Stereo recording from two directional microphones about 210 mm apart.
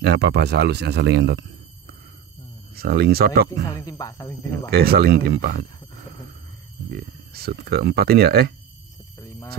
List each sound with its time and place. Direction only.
0.2 s speech: 50° right (ahead or behind)
2.7 s speech: 50° right (ahead or behind)
3.7 s speech: 15° left (ahead or behind)
4.6 s speech: 50° right (ahead or behind)
7.0 s speech: 45° right (ahead or behind)
9.2 s a sound: 10° left (ahead or behind)